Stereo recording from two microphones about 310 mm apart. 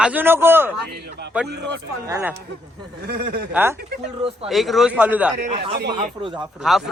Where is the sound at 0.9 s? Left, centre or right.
Right.